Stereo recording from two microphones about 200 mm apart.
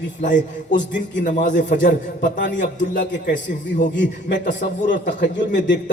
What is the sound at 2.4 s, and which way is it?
A man's voice, 60° left (ahead or behind).